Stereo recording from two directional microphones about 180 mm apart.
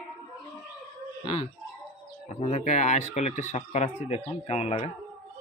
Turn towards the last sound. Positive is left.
turn(degrees=35)  # may be behind; listen again after turning